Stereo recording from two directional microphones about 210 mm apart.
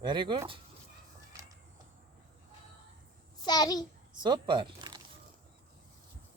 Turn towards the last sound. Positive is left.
turn(degrees=-20)  # may be behind; listen again after turning